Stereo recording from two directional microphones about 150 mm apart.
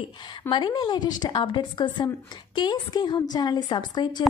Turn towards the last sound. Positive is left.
turn(degrees=30)  # may be behind; listen again after turning